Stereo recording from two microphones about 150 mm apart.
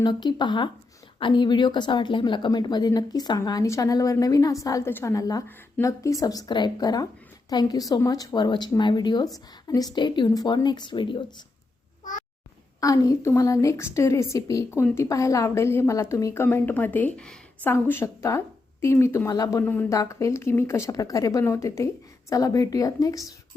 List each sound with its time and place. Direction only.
0.0 s a woman's voice: 30° left (ahead or behind)
12.8 s a woman's voice: 20° left (ahead or behind)
19.6 s a woman's voice: 10° left (ahead or behind)